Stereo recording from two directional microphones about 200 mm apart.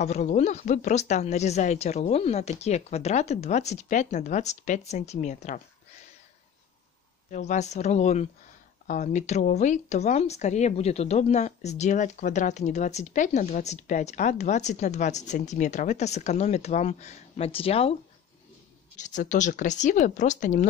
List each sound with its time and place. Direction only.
0.0 s a woman's voice: 35° left (ahead or behind)
7.2 s a woman's voice: 35° left (ahead or behind)
18.9 s a woman's voice: 40° left (ahead or behind)